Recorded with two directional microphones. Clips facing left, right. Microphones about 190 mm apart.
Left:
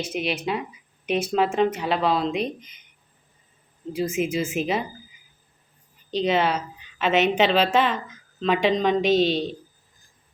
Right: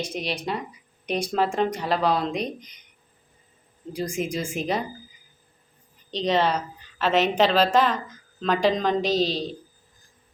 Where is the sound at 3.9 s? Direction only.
5° left (ahead or behind).